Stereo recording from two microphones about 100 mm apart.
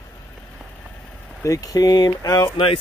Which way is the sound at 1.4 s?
35° left (ahead or behind).